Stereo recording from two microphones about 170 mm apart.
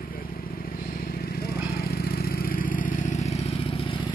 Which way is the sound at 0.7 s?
60° left (ahead or behind).